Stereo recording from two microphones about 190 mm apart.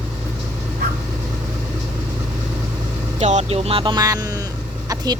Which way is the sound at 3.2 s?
35° right (ahead or behind).